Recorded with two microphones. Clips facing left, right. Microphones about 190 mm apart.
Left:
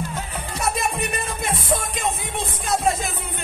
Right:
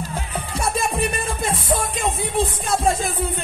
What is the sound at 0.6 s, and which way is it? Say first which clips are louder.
Music: right 2 dB; 30° right (ahead or behind).